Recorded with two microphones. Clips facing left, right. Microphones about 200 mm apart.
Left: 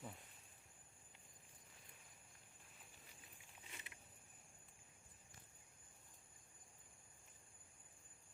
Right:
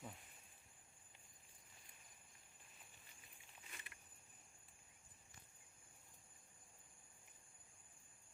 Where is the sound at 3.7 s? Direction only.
20° left (ahead or behind).